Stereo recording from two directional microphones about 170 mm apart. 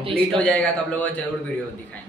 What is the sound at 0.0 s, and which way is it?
Speech, 35° right (ahead or behind).